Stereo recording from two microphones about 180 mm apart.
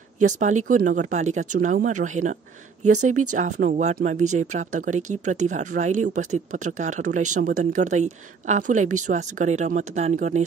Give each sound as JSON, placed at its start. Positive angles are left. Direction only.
{"t": 0.2, "sound": "speech", "side_deg": -45}